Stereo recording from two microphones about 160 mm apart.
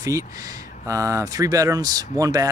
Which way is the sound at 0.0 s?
20° right (ahead or behind).